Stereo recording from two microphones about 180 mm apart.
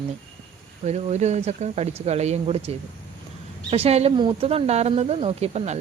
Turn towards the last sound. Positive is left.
turn(degrees=-35)  # may be behind; listen again after turning